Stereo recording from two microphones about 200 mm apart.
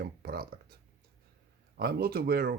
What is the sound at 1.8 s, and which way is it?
Speech, 50° right (ahead or behind).